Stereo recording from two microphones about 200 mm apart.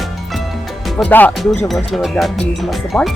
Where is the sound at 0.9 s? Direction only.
10° left (ahead or behind).